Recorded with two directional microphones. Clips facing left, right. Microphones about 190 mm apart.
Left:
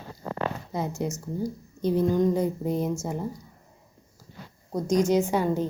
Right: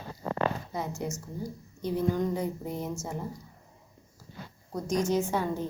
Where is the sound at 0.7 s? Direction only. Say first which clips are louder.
Left 4 dB; 25° left (ahead or behind).